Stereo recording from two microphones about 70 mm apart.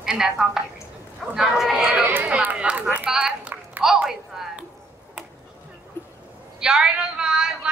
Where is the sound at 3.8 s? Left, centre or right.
Centre.